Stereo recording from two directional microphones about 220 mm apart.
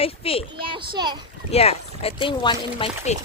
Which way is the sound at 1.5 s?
30° left (ahead or behind).